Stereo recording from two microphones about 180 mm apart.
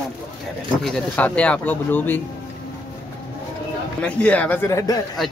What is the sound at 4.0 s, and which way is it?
Speech, 5° left (ahead or behind).